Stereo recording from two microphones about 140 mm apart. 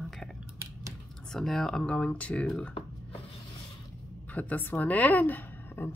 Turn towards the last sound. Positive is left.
turn(degrees=15)  # may be behind; listen again after turning